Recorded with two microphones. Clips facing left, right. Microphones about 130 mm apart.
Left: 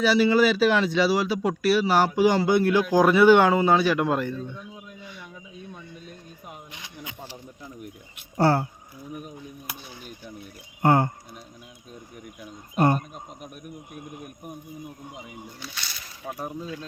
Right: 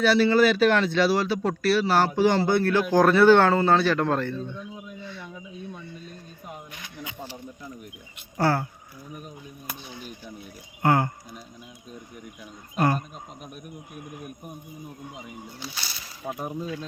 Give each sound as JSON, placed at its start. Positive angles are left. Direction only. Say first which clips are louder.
{"t": 0.0, "sound": "speech", "louder": "even", "side_deg": 10}
{"t": 4.9, "sound": "a sound", "louder": "right 4 dB", "side_deg": 10}
{"t": 8.4, "sound": "speech", "louder": "left 3 dB", "side_deg": 25}
{"t": 9.1, "sound": "a sound", "louder": "left 3 dB", "side_deg": 10}
{"t": 10.8, "sound": "speech", "louder": "left 2 dB", "side_deg": 25}
{"t": 12.7, "sound": "speech", "louder": "left 2 dB", "side_deg": 25}
{"t": 15.1, "sound": "speech", "louder": "right 1 dB", "side_deg": 5}
{"t": 15.6, "sound": "a sound", "louder": "right 2 dB", "side_deg": -35}
{"t": 16.2, "sound": "speech", "louder": "right 2 dB", "side_deg": -15}